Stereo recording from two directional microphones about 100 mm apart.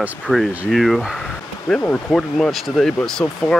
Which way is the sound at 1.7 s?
10° left (ahead or behind).